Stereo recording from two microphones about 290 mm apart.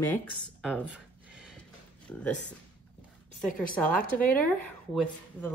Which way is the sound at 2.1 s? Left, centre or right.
Centre.